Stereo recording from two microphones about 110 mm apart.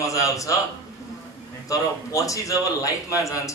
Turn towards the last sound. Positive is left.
turn(degrees=30)  # may be behind; listen again after turning